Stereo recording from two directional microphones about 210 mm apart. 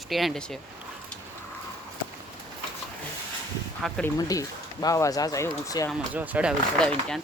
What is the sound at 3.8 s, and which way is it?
Speech, 5° left (ahead or behind).